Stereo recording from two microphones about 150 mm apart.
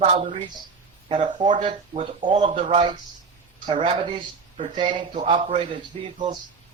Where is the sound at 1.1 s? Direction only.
30° right (ahead or behind).